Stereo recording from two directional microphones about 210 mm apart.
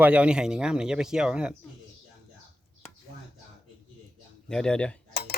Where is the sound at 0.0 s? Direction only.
5° right (ahead or behind).